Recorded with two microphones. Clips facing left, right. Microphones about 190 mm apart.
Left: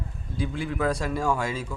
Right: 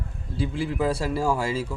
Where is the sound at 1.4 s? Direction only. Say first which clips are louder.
Right 3 dB; 30° right (ahead or behind).